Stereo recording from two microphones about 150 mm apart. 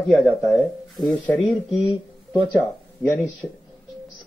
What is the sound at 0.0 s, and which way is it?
Speech, centre (ahead or behind).